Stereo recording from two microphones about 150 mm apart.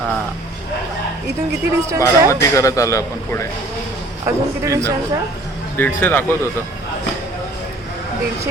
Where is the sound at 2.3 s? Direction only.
20° left (ahead or behind).